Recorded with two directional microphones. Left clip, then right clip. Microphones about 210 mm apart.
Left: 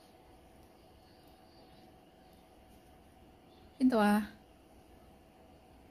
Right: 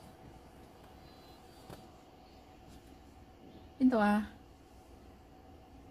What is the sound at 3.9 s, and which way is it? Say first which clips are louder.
Speech: left 1 dB; 40° left (ahead or behind).